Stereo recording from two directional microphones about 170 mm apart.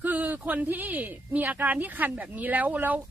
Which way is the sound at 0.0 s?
10° right (ahead or behind).